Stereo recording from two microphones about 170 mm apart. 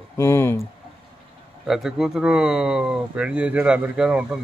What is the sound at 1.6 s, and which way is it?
Speech, centre (ahead or behind).